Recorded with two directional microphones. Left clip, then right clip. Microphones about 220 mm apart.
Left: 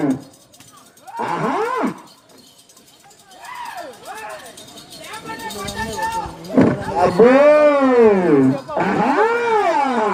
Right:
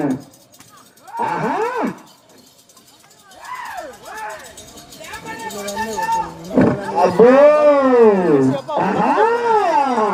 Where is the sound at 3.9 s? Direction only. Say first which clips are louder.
Even; centre (ahead or behind).